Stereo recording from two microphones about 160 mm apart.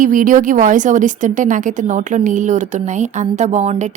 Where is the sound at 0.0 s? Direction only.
55° right (ahead or behind).